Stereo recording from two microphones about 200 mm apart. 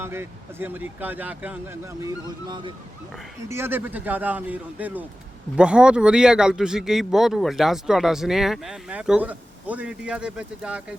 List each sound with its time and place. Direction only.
0.0 s speech: 10° right (ahead or behind)
2.5 s speech: 25° right (ahead or behind)
3.5 s speech: 10° right (ahead or behind)